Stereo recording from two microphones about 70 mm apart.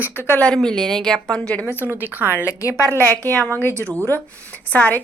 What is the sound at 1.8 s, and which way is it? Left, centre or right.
Speech, right.